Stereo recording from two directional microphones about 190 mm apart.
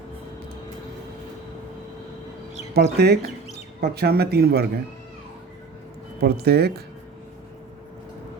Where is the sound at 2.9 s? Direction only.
60° right (ahead or behind).